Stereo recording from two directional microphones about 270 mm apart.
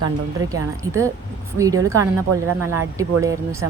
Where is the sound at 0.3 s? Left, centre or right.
Centre.